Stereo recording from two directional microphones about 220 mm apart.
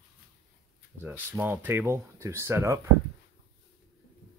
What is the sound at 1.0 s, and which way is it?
Speech, 10° right (ahead or behind).